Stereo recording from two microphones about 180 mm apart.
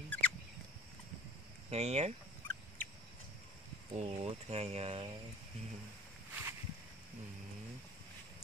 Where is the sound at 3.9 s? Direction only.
35° right (ahead or behind).